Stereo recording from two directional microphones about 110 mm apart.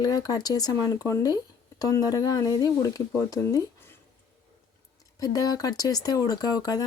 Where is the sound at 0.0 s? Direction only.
35° left (ahead or behind).